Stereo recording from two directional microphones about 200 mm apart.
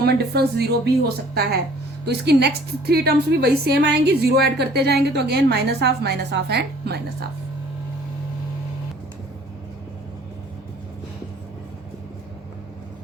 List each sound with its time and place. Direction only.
0.0 s a woman's voice: 55° right (ahead or behind)